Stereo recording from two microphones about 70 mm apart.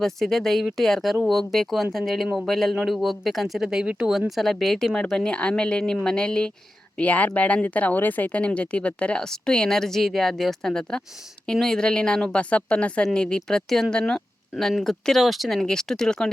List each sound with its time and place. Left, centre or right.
0.0 s speech: centre
4.3 s speech: centre